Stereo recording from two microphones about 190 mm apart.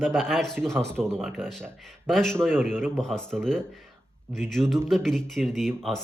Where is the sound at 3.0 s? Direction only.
5° left (ahead or behind).